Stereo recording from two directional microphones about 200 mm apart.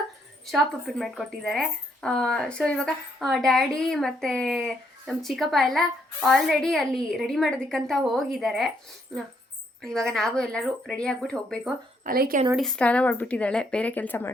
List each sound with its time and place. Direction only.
0.4 s a woman's voice: centre (ahead or behind)
12.0 s speech: 45° right (ahead or behind)
12.5 s speech: 5° left (ahead or behind)